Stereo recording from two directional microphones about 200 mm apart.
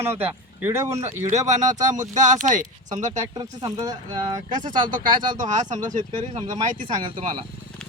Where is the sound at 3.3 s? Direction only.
20° right (ahead or behind).